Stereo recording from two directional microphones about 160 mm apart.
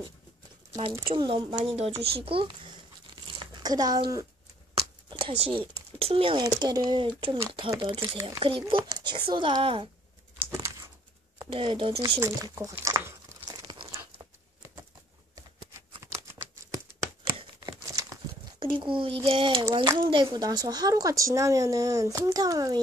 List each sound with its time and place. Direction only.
1.0 s a child's voice: 30° right (ahead or behind)
3.3 s a sound: 30° right (ahead or behind)
4.7 s a child's voice: 30° right (ahead or behind)
11.5 s a child's voice: 35° right (ahead or behind)
12.0 s crumpling: 25° right (ahead or behind)
16.0 s computer keyboard: 20° right (ahead or behind)
17.4 s crumpling: 25° right (ahead or behind)
18.6 s a sound: 30° right (ahead or behind)
19.2 s a child's voice: 30° right (ahead or behind)